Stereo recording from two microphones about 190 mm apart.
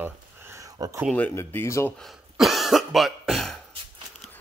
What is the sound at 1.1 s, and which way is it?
Speech, 10° left (ahead or behind).